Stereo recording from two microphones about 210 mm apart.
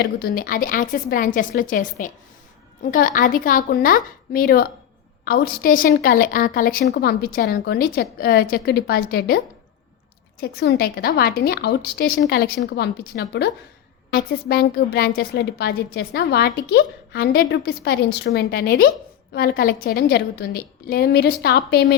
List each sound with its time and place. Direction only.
0.0 s a woman's voice: 45° left (ahead or behind)
10.4 s a woman's voice: 50° left (ahead or behind)